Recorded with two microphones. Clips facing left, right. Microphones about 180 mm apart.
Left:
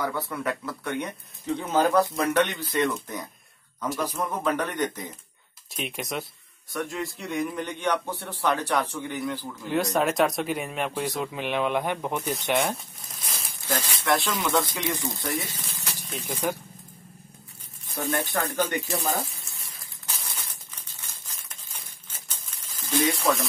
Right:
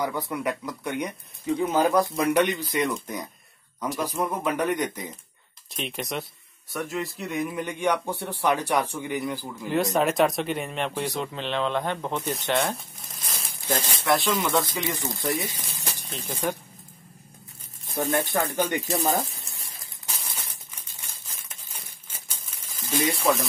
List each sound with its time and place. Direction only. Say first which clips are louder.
0.0 s speech: right 1 dB; 15° right (ahead or behind)
5.7 s speech: right 1 dB; centre (ahead or behind)
9.7 s speech: right 1 dB; centre (ahead or behind)
13.7 s speech: right 2 dB; 30° right (ahead or behind)
14.0 s speech: right 2 dB; centre (ahead or behind)
15.3 s speech: right 1 dB; 15° right (ahead or behind)
15.8 s a sound: even; 35° right (ahead or behind)
16.3 s speech: even; 10° left (ahead or behind)
17.9 s speech: right 3 dB; 15° right (ahead or behind)
20.1 s crumpling: even; 10° right (ahead or behind)
21.5 s a sound: right 1 dB; 10° right (ahead or behind)